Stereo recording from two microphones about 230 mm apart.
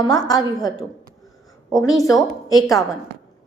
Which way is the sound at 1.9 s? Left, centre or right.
Centre.